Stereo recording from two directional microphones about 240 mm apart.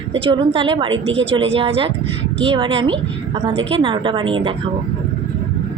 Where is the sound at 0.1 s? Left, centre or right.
Right.